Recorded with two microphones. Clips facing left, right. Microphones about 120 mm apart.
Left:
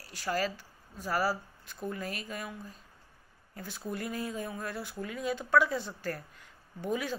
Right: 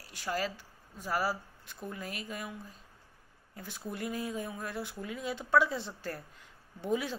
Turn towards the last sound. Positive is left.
turn(degrees=-25)  # may be behind; listen again after turning